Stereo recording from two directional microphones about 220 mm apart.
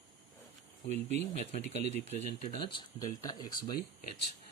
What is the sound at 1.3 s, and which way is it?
Speech, 30° left (ahead or behind).